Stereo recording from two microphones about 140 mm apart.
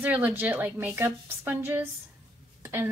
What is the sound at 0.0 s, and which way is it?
A woman's voice, 10° right (ahead or behind).